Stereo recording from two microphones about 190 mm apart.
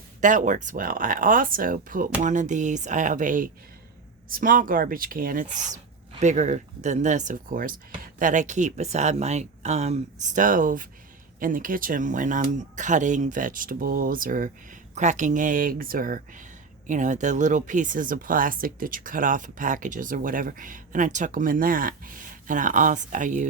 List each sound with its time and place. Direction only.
0.2 s speech: 40° right (ahead or behind)